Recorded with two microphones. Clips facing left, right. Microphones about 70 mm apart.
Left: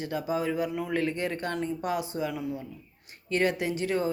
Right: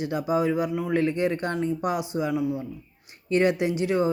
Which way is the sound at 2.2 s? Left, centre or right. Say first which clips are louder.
Right 6 dB; centre.